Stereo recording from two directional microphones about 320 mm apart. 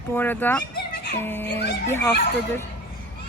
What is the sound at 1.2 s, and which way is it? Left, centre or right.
Speech, centre.